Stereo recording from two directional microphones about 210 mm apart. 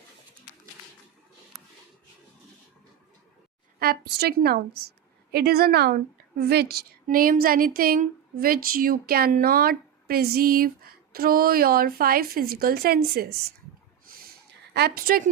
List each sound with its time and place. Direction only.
3.8 s a woman's voice: 50° right (ahead or behind)
14.7 s a woman's voice: 50° right (ahead or behind)